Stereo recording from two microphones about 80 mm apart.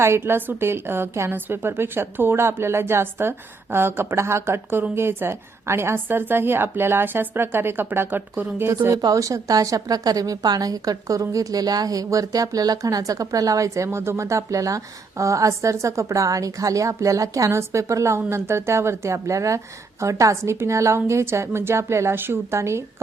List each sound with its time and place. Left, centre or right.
0.0 s a woman's voice: right
9.0 s a woman's voice: right